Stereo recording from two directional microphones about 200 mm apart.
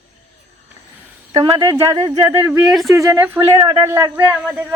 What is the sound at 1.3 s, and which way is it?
Speech, 20° right (ahead or behind).